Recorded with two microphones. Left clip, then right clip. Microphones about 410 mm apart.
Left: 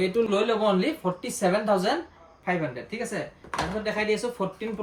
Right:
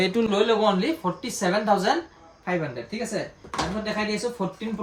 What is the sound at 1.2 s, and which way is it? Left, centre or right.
Speech, centre.